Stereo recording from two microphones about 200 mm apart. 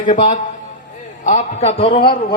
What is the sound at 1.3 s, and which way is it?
Speech, 35° left (ahead or behind).